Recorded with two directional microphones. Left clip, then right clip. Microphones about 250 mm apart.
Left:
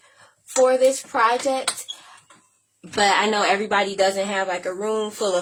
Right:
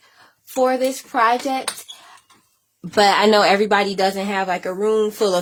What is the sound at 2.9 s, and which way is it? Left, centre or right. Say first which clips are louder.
A woman's voice: right 5 dB; right.